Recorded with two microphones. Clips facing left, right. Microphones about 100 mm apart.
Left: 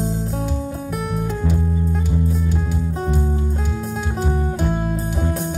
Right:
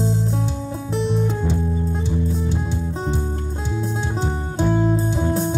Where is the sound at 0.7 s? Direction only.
30° right (ahead or behind).